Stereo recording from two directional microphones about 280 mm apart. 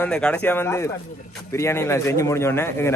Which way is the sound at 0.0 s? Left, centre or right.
Centre.